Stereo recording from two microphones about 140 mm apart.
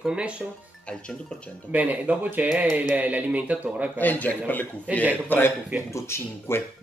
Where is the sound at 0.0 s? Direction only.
5° right (ahead or behind).